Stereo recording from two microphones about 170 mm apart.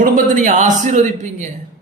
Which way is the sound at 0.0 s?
50° right (ahead or behind).